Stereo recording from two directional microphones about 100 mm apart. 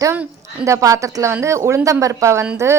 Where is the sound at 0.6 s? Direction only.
30° right (ahead or behind).